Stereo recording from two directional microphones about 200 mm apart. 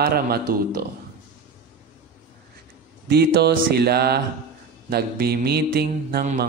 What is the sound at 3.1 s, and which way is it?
A man's voice, 55° right (ahead or behind).